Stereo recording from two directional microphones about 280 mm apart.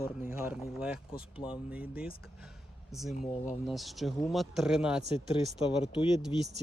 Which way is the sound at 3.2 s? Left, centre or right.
Left.